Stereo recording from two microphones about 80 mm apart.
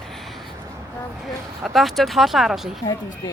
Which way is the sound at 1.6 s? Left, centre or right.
Centre.